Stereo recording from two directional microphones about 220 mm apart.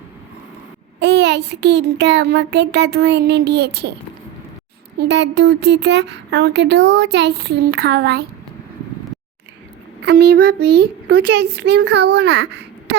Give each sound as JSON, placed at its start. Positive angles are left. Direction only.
{"t": 0.9, "sound": "speech", "side_deg": -50}
{"t": 4.9, "sound": "speech", "side_deg": -50}
{"t": 10.0, "sound": "a child's voice", "side_deg": -50}